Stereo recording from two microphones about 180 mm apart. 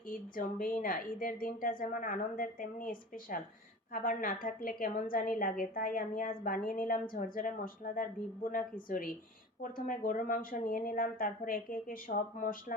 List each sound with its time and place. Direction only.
0.1 s a woman's voice: 50° left (ahead or behind)